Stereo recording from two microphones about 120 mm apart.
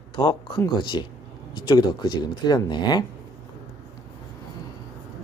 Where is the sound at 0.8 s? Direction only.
40° left (ahead or behind).